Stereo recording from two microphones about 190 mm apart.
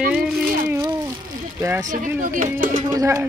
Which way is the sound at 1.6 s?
15° right (ahead or behind).